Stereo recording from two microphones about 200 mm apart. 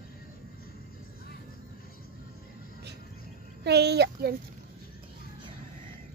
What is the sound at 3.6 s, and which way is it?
Speech, 55° right (ahead or behind).